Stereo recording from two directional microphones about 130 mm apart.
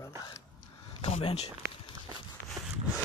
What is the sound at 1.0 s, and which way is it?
Speech, 50° left (ahead or behind).